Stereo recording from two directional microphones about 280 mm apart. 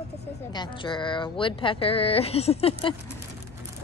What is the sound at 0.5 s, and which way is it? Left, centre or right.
Speech, centre.